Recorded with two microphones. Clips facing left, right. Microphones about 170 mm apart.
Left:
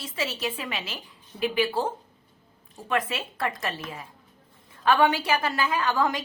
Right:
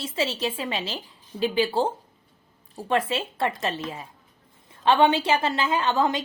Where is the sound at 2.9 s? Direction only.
30° right (ahead or behind).